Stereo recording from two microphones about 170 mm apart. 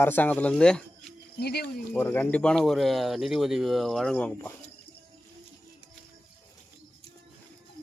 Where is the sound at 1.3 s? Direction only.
70° left (ahead or behind).